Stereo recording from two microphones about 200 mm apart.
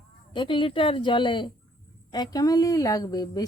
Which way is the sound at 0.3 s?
25° left (ahead or behind).